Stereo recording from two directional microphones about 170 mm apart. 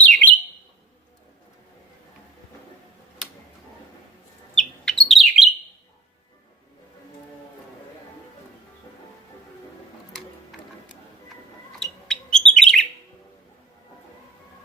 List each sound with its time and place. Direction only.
0.0 s bird: 10° left (ahead or behind)
4.5 s bird: centre (ahead or behind)
11.8 s bird: 5° left (ahead or behind)